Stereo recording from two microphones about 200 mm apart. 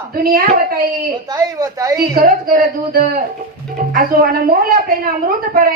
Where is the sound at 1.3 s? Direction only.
20° right (ahead or behind).